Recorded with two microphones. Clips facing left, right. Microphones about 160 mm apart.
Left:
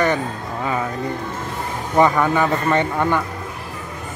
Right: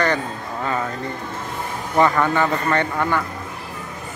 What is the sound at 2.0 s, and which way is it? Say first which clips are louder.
Speech: left 1 dB; 10° left (ahead or behind).